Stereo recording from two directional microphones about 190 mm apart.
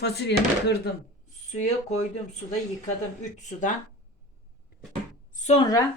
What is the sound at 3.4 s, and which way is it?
Speech, 40° left (ahead or behind).